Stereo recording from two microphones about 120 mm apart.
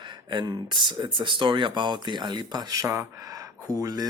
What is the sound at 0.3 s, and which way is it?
Speech, 40° right (ahead or behind).